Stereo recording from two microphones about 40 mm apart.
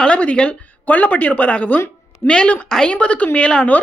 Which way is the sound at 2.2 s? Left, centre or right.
Left.